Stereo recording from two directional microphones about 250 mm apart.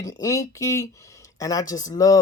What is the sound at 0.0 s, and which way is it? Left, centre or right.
Speech, centre.